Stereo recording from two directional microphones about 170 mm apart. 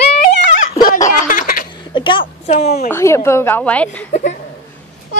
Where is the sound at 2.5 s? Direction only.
40° left (ahead or behind).